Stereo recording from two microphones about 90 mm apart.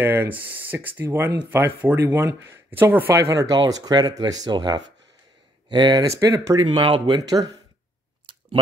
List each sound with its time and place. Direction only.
0.0 s speech: 25° right (ahead or behind)
3.1 s speech: 35° right (ahead or behind); by 6.0 s 55° right (ahead or behind)
6.0 s speech: 35° right (ahead or behind)
6.7 s speech: 75° right (ahead or behind)
7.2 s speech: 45° right (ahead or behind)